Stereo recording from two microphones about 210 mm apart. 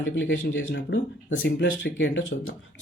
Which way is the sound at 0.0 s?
60° left (ahead or behind).